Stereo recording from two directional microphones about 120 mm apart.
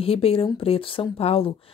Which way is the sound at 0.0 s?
50° left (ahead or behind).